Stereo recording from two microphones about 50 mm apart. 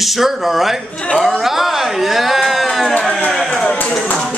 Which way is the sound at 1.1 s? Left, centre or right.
Centre.